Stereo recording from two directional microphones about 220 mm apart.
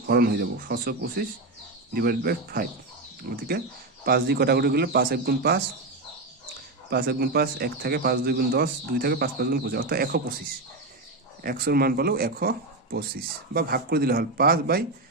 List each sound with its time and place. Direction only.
0.0 s speech: 45° right (ahead or behind)
6.9 s speech: 45° right (ahead or behind)
11.4 s speech: 40° right (ahead or behind)